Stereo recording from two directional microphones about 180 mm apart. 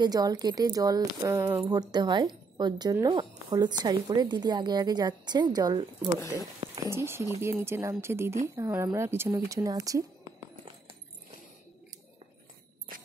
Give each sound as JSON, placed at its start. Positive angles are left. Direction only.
{"t": 0.0, "sound": "a woman's voice", "side_deg": -20}
{"t": 6.6, "sound": "a sound", "side_deg": -25}
{"t": 6.9, "sound": "speech", "side_deg": -15}